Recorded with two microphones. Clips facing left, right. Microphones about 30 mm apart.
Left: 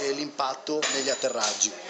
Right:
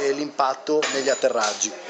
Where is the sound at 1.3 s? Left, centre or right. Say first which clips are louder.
Right 6 dB; centre.